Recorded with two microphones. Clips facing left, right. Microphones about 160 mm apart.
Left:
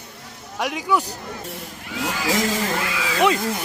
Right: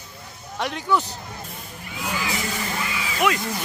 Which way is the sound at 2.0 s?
90° left.